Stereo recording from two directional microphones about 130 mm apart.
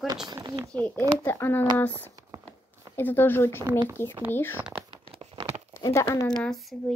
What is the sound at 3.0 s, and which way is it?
Speech, 15° left (ahead or behind).